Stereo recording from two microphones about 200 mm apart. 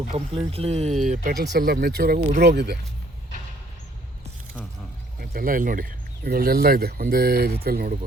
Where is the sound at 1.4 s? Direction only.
55° right (ahead or behind).